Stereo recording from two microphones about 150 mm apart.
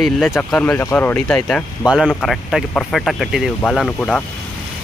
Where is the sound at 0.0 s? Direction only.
Centre (ahead or behind).